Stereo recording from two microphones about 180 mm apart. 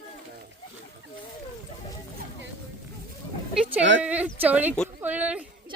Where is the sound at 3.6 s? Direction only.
10° right (ahead or behind).